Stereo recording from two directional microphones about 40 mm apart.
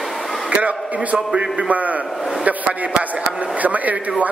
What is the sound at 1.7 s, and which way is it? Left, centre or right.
Speech, right.